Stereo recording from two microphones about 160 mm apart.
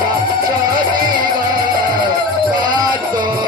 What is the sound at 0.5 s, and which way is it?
Music, 30° right (ahead or behind).